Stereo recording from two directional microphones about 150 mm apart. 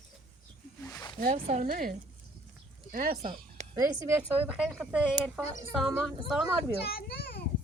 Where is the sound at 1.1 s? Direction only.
65° right (ahead or behind).